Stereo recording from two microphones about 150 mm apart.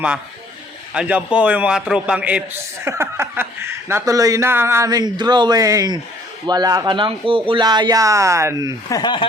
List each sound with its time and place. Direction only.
0.9 s a man's voice: 10° right (ahead or behind)
8.9 s speech: 30° left (ahead or behind)